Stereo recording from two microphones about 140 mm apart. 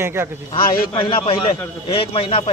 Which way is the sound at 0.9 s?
40° left (ahead or behind).